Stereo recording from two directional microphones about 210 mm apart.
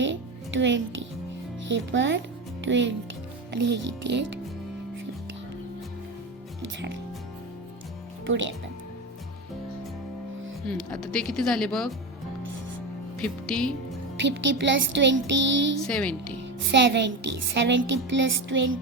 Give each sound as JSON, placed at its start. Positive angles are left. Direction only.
{"t": 0.0, "sound": "music", "side_deg": -60}
{"t": 1.6, "sound": "a woman's voice", "side_deg": -60}
{"t": 6.7, "sound": "a woman's voice", "side_deg": -60}
{"t": 8.3, "sound": "a woman's voice", "side_deg": -65}
{"t": 10.7, "sound": "speech", "side_deg": 5}
{"t": 13.1, "sound": "speech", "side_deg": 5}
{"t": 14.3, "sound": "a woman's voice", "side_deg": -60}
{"t": 15.8, "sound": "speech", "side_deg": 5}
{"t": 16.6, "sound": "a woman's voice", "side_deg": -55}